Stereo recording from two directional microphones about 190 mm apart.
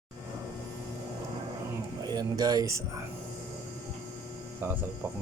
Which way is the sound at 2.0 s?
20° right (ahead or behind).